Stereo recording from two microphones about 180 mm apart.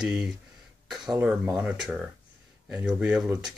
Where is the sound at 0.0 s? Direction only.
5° right (ahead or behind).